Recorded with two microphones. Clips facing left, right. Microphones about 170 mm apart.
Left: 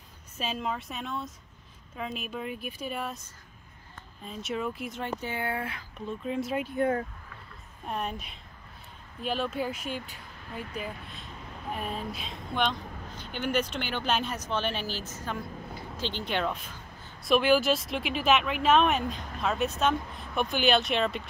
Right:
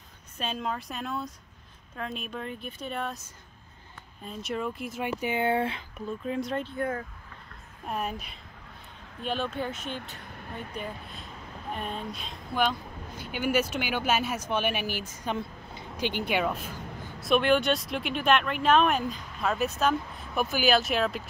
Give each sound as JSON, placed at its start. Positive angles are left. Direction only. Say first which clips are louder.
{"t": 0.4, "sound": "speech", "louder": "even", "side_deg": 5}
{"t": 4.2, "sound": "speech", "louder": "even", "side_deg": 0}
{"t": 5.0, "sound": "speech", "louder": "right 6 dB", "side_deg": -15}
{"t": 6.0, "sound": "speech", "louder": "even", "side_deg": 0}
{"t": 6.8, "sound": "speech", "louder": "left 7 dB", "side_deg": 30}
{"t": 7.8, "sound": "speech", "louder": "right 1 dB", "side_deg": -5}
{"t": 17.2, "sound": "speech", "louder": "even", "side_deg": 0}